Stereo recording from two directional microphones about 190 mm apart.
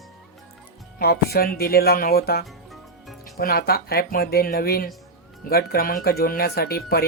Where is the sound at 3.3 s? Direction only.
55° left (ahead or behind).